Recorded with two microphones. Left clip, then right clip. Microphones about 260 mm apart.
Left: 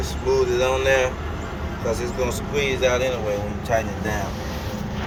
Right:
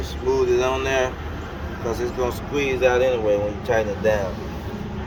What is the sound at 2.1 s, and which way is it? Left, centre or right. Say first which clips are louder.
Speech: even; right.